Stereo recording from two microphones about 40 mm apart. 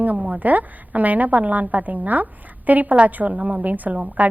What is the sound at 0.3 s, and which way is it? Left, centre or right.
A woman's voice, right.